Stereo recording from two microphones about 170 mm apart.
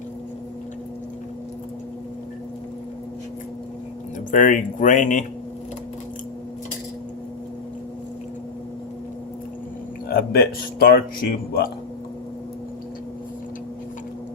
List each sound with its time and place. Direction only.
4.3 s speech: 50° left (ahead or behind)
10.1 s speech: 60° left (ahead or behind)